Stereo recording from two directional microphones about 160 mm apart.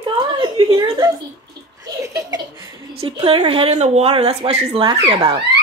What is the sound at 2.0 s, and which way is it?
Laughter, 20° right (ahead or behind).